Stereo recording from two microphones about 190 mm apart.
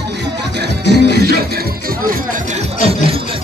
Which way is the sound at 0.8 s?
65° left (ahead or behind).